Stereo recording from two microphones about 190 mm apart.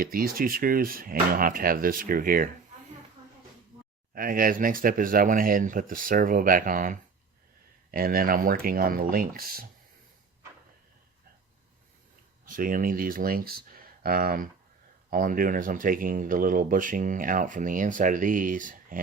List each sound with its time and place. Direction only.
0.0 s speech: 50° right (ahead or behind)
4.1 s speech: 50° right (ahead or behind)
12.5 s speech: 45° right (ahead or behind)